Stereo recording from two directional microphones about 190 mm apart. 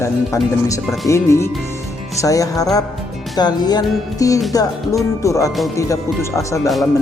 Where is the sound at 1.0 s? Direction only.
15° left (ahead or behind).